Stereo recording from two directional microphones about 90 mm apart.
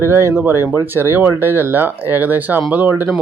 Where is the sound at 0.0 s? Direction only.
30° right (ahead or behind).